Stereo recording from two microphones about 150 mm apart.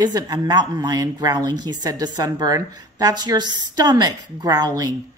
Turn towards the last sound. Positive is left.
turn(degrees=-25)  # may be behind; listen again after turning